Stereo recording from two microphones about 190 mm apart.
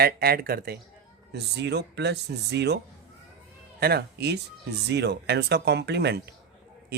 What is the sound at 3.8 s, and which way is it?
Speech, 55° right (ahead or behind).